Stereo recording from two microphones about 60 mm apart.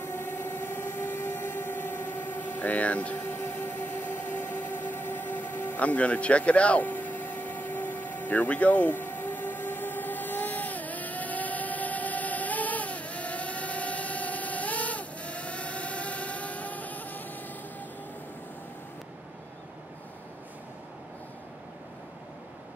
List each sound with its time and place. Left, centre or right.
0.0 s train: left